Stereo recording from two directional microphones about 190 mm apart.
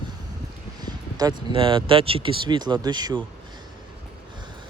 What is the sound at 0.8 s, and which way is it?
Speech, 20° right (ahead or behind).